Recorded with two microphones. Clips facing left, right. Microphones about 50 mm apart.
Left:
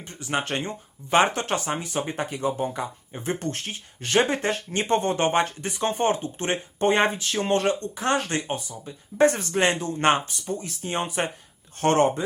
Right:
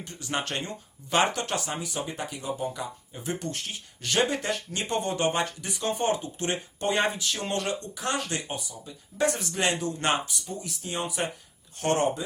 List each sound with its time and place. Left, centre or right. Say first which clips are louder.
0.0 s speech: left 3 dB; left